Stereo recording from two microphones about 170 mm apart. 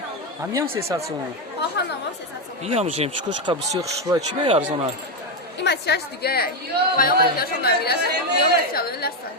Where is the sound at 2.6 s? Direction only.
40° right (ahead or behind).